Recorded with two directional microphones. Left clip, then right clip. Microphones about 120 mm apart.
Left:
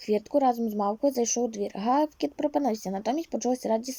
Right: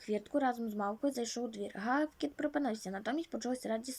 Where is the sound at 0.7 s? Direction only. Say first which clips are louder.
Left 9 dB; 25° left (ahead or behind).